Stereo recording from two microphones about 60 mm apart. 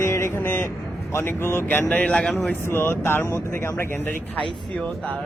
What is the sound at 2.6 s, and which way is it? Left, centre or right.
Speech, left.